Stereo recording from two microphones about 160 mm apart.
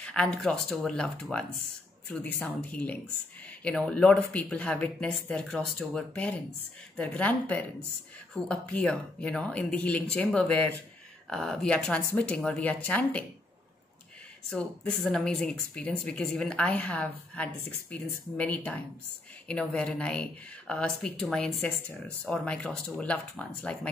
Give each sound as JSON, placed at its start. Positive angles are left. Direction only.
{"t": 0.0, "sound": "speech", "side_deg": 5}
{"t": 14.5, "sound": "speech", "side_deg": 5}